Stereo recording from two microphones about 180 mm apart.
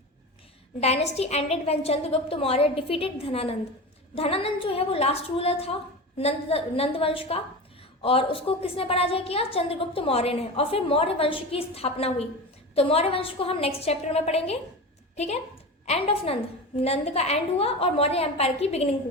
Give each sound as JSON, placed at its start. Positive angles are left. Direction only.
{"t": 0.8, "sound": "a woman's voice", "side_deg": 35}